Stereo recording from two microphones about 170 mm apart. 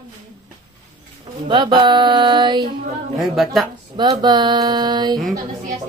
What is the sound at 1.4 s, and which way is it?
Speech, 30° right (ahead or behind).